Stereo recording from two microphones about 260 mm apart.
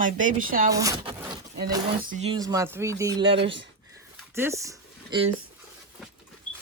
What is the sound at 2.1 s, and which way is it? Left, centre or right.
Speech, right.